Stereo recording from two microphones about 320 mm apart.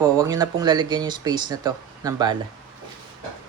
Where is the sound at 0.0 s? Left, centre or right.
Centre.